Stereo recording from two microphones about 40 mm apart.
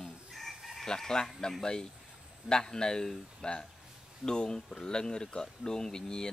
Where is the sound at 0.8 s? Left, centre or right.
Centre.